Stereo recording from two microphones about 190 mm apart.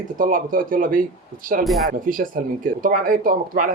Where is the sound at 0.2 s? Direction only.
45° right (ahead or behind).